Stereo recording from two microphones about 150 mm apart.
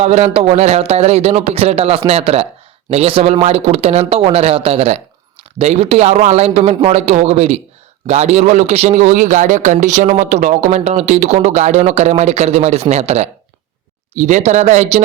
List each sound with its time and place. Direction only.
0.0 s speech: 45° right (ahead or behind)